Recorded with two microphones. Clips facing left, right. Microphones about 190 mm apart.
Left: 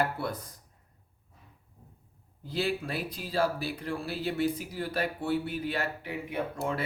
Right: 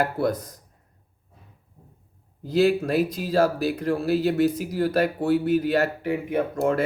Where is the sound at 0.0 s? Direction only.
40° right (ahead or behind).